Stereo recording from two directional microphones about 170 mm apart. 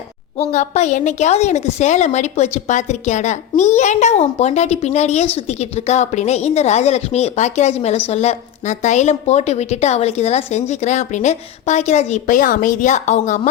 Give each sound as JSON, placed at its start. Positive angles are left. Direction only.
{"t": 0.3, "sound": "a woman's voice", "side_deg": 40}